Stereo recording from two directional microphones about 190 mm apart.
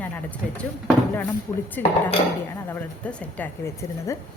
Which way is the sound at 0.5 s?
5° left (ahead or behind).